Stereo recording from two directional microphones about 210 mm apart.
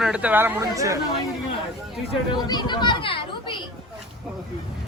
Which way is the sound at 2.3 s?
20° left (ahead or behind).